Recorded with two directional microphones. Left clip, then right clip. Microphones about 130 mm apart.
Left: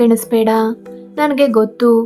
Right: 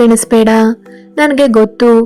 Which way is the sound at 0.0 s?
35° right (ahead or behind).